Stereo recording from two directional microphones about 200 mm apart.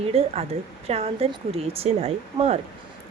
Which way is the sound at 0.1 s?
30° right (ahead or behind).